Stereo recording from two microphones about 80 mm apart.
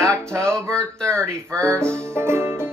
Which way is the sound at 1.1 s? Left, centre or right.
Centre.